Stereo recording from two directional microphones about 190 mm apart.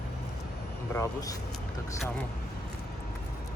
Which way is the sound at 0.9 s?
15° left (ahead or behind).